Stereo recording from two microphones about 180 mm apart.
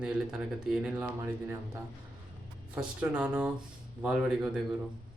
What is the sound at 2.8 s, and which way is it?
Speech, 5° right (ahead or behind).